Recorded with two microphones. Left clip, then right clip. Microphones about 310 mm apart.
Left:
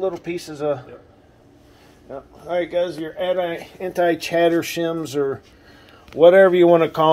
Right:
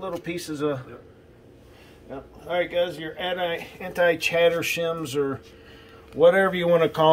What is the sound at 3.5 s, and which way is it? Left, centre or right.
Speech, left.